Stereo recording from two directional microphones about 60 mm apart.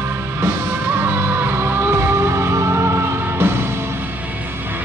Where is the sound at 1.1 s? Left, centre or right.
Right.